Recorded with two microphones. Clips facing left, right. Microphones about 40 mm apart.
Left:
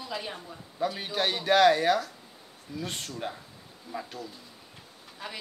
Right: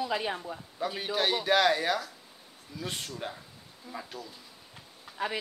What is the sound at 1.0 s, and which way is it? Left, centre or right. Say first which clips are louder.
A man's voice: right 1 dB; centre.